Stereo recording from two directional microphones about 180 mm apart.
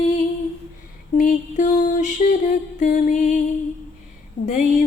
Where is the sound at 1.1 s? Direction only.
45° left (ahead or behind).